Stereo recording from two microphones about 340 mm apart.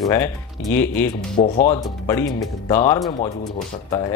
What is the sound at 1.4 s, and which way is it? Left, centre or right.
Speech, left.